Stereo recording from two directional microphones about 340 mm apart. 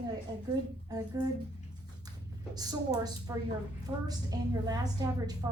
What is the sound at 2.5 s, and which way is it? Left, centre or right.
A woman's voice, centre.